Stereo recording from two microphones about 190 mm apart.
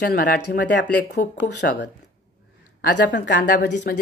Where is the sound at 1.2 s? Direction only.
45° left (ahead or behind).